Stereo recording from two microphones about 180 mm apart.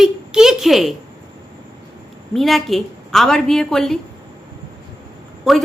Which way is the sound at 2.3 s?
Centre (ahead or behind).